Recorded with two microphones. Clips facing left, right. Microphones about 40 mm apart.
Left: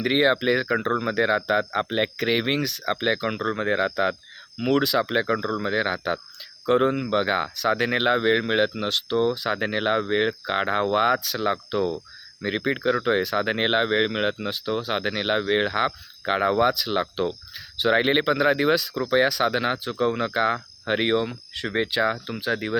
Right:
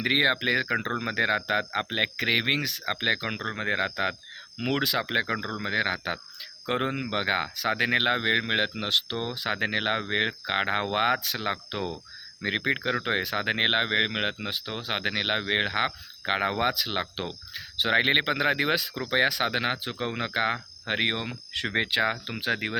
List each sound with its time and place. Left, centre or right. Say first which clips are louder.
0.0 s speech: left 3 dB; centre
4.7 s speech: left 6 dB; right
4.9 s speech: left 4 dB; centre
21.5 s speech: left 1 dB; right